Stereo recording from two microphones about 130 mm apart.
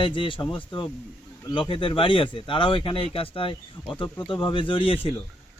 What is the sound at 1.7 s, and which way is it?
Speech, 40° left (ahead or behind).